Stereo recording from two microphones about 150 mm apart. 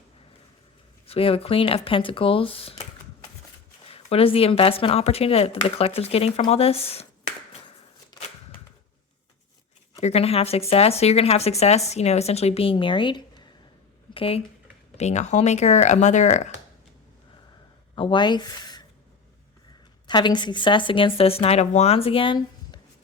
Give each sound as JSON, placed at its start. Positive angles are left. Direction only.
{"t": 1.0, "sound": "speech", "side_deg": 40}
{"t": 3.8, "sound": "speech", "side_deg": 40}
{"t": 10.0, "sound": "speech", "side_deg": 45}
{"t": 14.9, "sound": "speech", "side_deg": 50}
{"t": 17.9, "sound": "speech", "side_deg": 35}
{"t": 20.1, "sound": "speech", "side_deg": 30}